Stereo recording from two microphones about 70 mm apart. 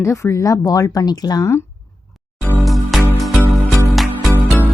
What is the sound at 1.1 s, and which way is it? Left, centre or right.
Speech, left.